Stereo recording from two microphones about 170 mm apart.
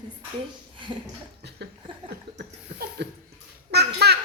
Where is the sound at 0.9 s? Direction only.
30° right (ahead or behind).